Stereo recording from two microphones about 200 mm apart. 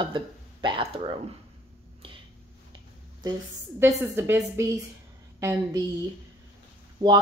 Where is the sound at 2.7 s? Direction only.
20° right (ahead or behind).